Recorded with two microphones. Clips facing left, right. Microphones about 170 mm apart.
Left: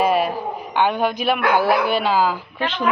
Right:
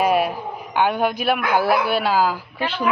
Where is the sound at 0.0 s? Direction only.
10° right (ahead or behind).